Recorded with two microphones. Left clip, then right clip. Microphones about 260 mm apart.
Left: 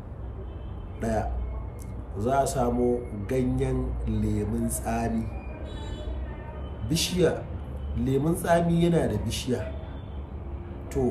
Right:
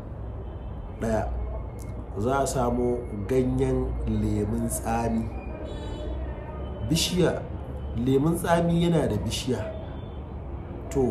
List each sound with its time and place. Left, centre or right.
1.0 s speech: centre
6.9 s speech: centre